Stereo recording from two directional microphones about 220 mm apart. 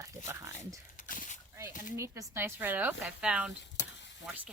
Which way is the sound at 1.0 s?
35° left (ahead or behind).